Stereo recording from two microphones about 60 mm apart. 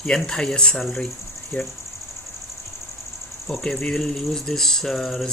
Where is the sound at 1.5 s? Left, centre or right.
Left.